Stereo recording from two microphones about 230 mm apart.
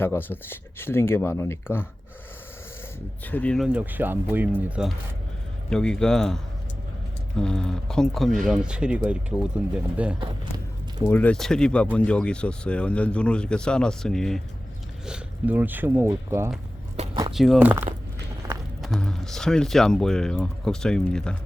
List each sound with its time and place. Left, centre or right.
0.0 s speech: centre
3.2 s speech: centre
11.0 s speech: centre
17.0 s a sound: right
17.3 s speech: centre